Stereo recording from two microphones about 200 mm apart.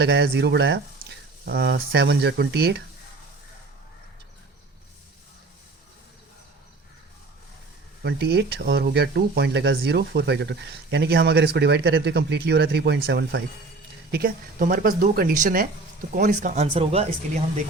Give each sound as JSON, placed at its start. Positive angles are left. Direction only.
{"t": 0.0, "sound": "speech", "side_deg": -55}
{"t": 8.0, "sound": "speech", "side_deg": -55}